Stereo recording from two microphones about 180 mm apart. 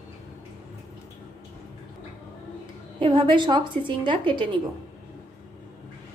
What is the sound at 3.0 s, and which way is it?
A woman's voice, 25° right (ahead or behind).